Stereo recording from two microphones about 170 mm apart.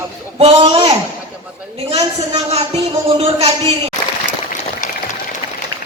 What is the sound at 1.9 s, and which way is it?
Speech, 40° right (ahead or behind).